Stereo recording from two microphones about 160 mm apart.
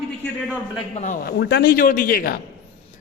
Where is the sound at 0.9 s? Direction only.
50° left (ahead or behind); by 2.4 s 70° left (ahead or behind).